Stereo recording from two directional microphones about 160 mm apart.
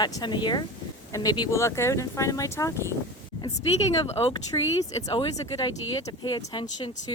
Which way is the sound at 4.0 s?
35° left (ahead or behind).